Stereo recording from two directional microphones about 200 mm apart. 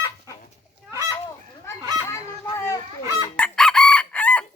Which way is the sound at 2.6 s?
15° left (ahead or behind).